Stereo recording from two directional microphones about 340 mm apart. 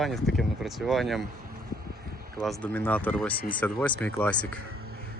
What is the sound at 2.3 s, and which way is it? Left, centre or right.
Speech, centre.